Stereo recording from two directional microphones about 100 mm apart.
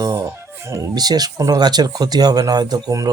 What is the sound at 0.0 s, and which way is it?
Speech, 35° right (ahead or behind).